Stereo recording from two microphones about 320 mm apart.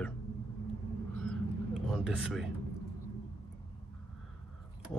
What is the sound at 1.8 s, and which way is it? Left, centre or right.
Speech, centre.